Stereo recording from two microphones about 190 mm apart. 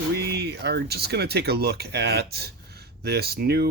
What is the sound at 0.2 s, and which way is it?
Speech, 60° right (ahead or behind).